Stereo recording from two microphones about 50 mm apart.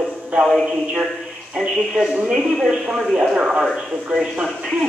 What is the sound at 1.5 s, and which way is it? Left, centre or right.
Speech, centre.